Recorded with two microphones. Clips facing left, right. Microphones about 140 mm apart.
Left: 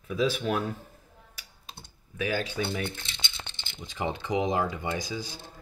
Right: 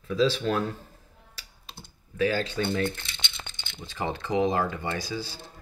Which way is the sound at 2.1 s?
15° left (ahead or behind).